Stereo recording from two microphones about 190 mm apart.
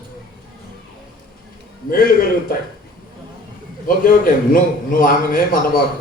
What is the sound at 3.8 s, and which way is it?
A man's voice, 50° left (ahead or behind).